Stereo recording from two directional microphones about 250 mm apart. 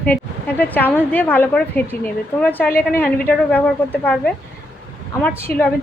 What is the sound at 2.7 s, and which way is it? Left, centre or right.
Speech, left.